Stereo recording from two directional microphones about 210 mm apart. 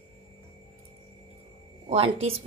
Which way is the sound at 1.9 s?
30° right (ahead or behind).